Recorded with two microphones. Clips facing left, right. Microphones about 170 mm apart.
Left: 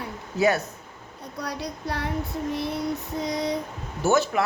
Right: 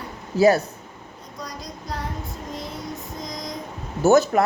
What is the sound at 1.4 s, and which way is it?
Child singing, 65° left (ahead or behind).